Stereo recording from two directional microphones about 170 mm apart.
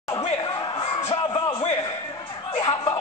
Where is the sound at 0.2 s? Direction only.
25° left (ahead or behind).